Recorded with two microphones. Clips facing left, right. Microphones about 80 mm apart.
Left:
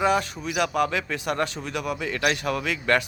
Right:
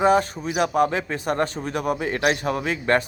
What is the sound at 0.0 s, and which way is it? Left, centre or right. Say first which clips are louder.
Speech: right 4 dB; right.